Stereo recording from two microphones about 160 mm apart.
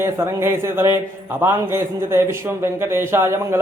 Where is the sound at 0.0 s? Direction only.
15° right (ahead or behind).